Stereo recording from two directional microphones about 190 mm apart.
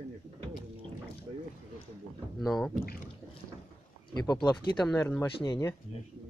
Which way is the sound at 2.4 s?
Centre (ahead or behind).